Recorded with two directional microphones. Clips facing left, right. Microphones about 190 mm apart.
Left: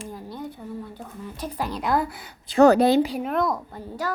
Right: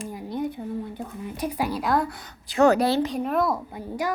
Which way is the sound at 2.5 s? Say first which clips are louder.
Left 3 dB; 30° left (ahead or behind).